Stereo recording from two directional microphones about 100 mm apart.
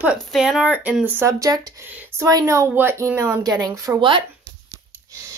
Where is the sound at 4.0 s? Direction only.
55° right (ahead or behind).